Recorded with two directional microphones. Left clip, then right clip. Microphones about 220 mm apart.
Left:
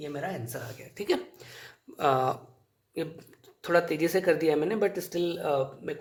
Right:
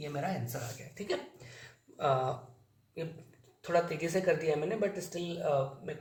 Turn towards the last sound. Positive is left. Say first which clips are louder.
# left 3 dB
turn(degrees=55)  # may be behind; listen again after turning